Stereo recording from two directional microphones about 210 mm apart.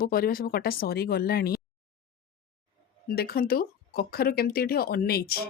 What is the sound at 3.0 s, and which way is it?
A woman's voice, 45° left (ahead or behind).